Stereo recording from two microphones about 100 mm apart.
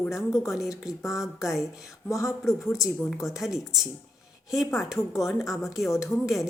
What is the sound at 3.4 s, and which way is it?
Speech, 5° right (ahead or behind).